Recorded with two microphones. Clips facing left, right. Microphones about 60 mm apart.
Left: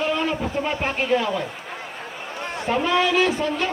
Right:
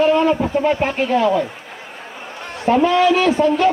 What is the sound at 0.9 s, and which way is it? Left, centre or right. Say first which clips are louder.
Speech: right 6 dB; right.